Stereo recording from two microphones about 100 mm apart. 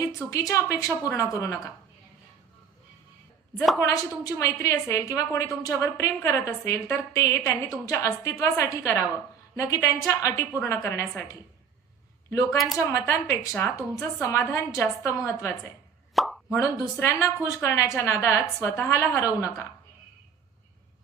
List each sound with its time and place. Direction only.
0.3 s a woman's voice: 35° left (ahead or behind)
3.8 s a woman's voice: 35° left (ahead or behind)
12.3 s a woman's voice: 30° left (ahead or behind)
12.5 s speech: centre (ahead or behind)
12.9 s a woman's voice: 30° left (ahead or behind)
16.1 s plop: centre (ahead or behind)
16.5 s a woman's voice: 30° left (ahead or behind)